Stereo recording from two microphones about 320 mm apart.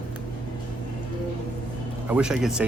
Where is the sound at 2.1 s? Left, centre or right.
Centre.